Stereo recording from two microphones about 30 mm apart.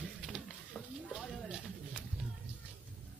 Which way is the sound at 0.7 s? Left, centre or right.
Left.